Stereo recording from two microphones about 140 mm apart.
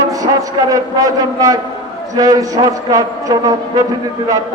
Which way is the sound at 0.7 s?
25° right (ahead or behind).